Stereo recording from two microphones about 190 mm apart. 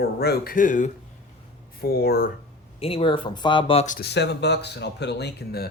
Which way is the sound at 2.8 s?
30° left (ahead or behind).